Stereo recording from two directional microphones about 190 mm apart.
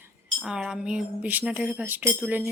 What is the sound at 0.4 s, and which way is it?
Speech, 5° right (ahead or behind).